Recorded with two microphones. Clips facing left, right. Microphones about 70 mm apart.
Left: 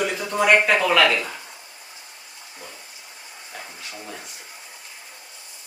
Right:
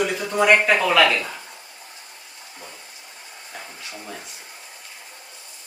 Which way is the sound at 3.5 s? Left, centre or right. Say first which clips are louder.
Even; centre.